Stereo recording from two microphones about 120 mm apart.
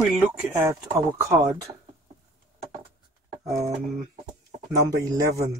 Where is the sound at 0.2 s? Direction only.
20° right (ahead or behind).